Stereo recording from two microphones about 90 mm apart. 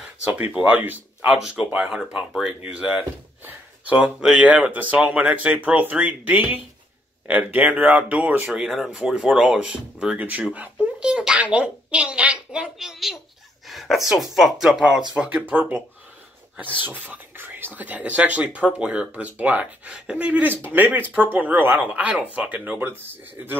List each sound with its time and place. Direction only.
0.3 s speech: 15° right (ahead or behind)
8.5 s speech: centre (ahead or behind); by 15.8 s 20° right (ahead or behind)
16.8 s speech: 20° right (ahead or behind)